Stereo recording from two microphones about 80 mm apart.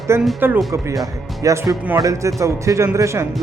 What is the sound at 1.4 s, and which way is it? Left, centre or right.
Speech, right.